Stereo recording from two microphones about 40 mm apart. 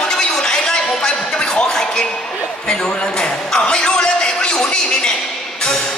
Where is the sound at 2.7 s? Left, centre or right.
Centre.